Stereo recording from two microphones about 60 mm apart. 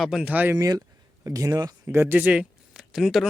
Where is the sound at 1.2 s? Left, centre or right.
Right.